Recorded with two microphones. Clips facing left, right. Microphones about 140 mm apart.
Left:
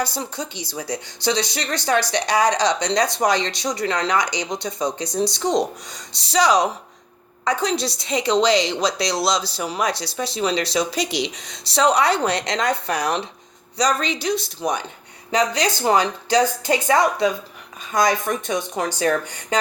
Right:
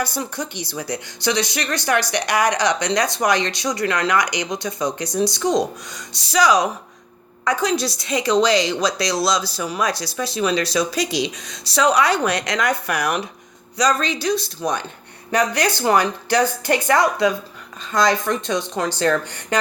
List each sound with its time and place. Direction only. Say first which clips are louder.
0.0 s a woman's voice: right 1 dB; 25° left (ahead or behind)
1.5 s speech: right 2 dB; 65° right (ahead or behind)
2.2 s a woman's voice: even; 25° left (ahead or behind)
4.2 s speech: right 1 dB; 70° right (ahead or behind)
4.4 s a woman's voice: right 1 dB; 25° left (ahead or behind)
15.4 s speech: right 1 dB; 55° right (ahead or behind)
15.7 s a woman's voice: right 1 dB; 20° left (ahead or behind)